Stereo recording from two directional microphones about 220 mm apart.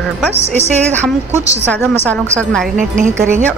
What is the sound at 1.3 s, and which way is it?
Speech, 5° left (ahead or behind).